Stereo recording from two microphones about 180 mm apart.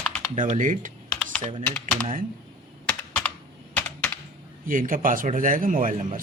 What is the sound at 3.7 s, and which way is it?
Computer keyboard, 10° left (ahead or behind).